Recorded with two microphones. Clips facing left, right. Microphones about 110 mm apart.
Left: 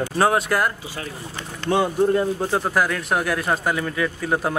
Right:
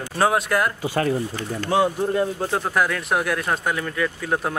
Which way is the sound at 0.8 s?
55° right (ahead or behind).